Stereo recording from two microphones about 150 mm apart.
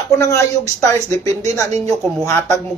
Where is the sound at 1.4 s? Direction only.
50° right (ahead or behind).